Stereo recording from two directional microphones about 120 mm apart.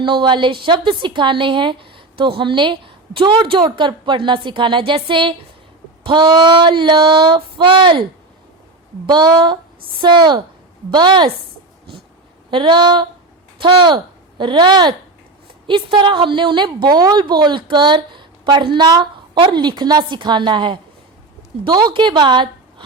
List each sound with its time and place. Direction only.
0.0 s a woman's voice: 40° right (ahead or behind)
9.0 s a woman's voice: 35° right (ahead or behind)
12.5 s a woman's voice: 40° right (ahead or behind)